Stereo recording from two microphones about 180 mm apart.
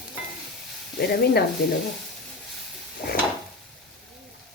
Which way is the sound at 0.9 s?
65° left (ahead or behind).